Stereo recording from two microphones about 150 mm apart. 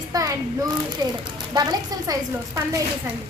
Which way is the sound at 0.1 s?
25° right (ahead or behind).